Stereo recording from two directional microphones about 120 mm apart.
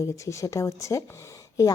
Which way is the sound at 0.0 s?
25° left (ahead or behind).